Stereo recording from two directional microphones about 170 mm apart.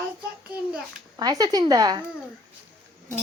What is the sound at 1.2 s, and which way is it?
Speech, 20° right (ahead or behind).